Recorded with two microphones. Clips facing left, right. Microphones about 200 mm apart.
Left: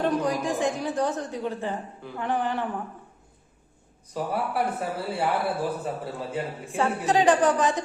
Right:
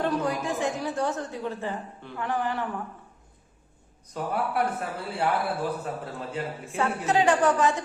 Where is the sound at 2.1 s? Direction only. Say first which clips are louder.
Left 2 dB; 20° left (ahead or behind).